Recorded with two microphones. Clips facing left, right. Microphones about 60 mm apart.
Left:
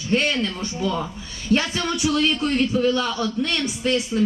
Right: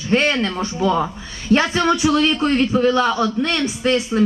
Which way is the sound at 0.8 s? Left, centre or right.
Right.